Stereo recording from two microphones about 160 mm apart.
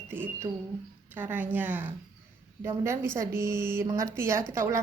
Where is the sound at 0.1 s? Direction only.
15° right (ahead or behind).